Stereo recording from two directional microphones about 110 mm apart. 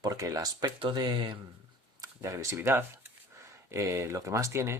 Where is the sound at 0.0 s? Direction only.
30° right (ahead or behind).